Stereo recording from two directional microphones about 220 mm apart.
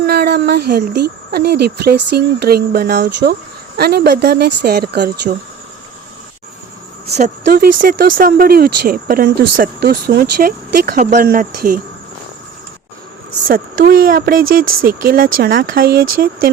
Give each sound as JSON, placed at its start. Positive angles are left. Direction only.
{"t": 0.0, "sound": "speech", "side_deg": -45}
{"t": 7.4, "sound": "speech", "side_deg": -45}
{"t": 13.5, "sound": "speech", "side_deg": -40}